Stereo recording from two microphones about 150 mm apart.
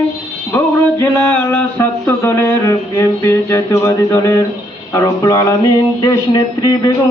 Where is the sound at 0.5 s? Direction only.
15° left (ahead or behind).